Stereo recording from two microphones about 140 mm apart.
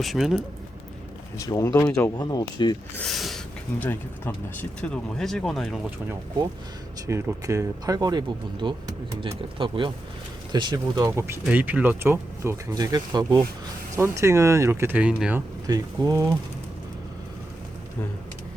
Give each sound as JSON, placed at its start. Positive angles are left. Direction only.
{"t": 0.0, "sound": "speech", "side_deg": 0}
{"t": 1.4, "sound": "speech", "side_deg": 20}
{"t": 2.9, "sound": "speech", "side_deg": 5}
{"t": 3.8, "sound": "speech", "side_deg": 15}
{"t": 7.1, "sound": "speech", "side_deg": -20}
{"t": 15.6, "sound": "speech", "side_deg": -25}